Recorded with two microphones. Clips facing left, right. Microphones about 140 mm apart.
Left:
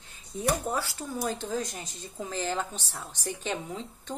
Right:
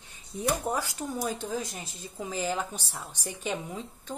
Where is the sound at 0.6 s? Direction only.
15° right (ahead or behind).